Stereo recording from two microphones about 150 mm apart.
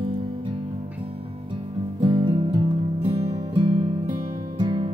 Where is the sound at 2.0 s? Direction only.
35° right (ahead or behind).